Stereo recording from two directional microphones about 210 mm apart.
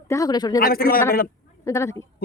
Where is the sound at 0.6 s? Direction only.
45° left (ahead or behind).